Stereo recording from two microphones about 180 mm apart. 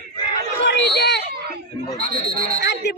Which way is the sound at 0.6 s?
75° left (ahead or behind).